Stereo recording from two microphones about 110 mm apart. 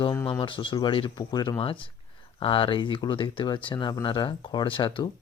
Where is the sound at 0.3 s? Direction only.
50° left (ahead or behind).